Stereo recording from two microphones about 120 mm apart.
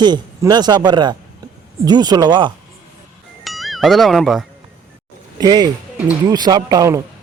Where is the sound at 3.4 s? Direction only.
Centre (ahead or behind).